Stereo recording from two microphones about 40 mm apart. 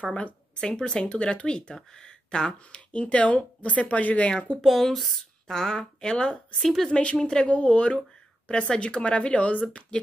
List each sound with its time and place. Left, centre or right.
0.0 s speech: left
4.3 s speech: left
4.6 s speech: centre
5.5 s a woman's voice: centre; by 9.8 s left